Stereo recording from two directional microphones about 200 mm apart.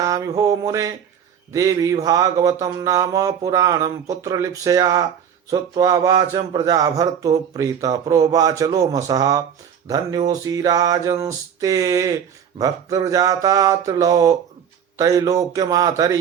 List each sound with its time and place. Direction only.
0.0 s speech: 15° right (ahead or behind)